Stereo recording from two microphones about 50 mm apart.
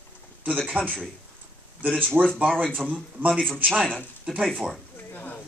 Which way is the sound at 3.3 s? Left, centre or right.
Centre.